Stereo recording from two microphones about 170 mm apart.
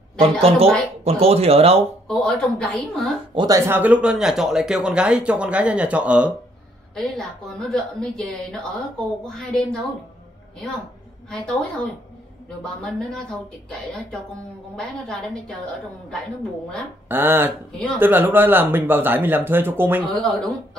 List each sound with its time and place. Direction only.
0.2 s speech: 35° right (ahead or behind)
2.0 s a woman's voice: 5° left (ahead or behind)
3.3 s a woman's voice: 20° right (ahead or behind); by 9.8 s 5° left (ahead or behind)
11.2 s a woman's voice: 5° left (ahead or behind)
14.8 s a woman's voice: 5° left (ahead or behind)
17.1 s speech: 10° right (ahead or behind)
20.2 s a woman's voice: 5° left (ahead or behind)